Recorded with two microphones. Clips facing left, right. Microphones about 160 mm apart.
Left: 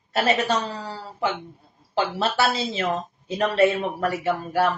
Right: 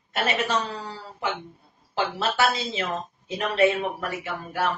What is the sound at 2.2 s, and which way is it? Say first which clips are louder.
Speech: even; 35° left (ahead or behind).